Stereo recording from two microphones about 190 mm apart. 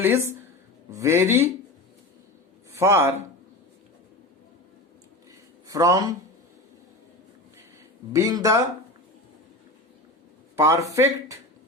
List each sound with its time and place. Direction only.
0.0 s speech: 15° right (ahead or behind)
2.7 s speech: 15° right (ahead or behind)
5.7 s speech: 15° right (ahead or behind)
8.1 s speech: 20° right (ahead or behind)
10.6 s speech: 15° right (ahead or behind)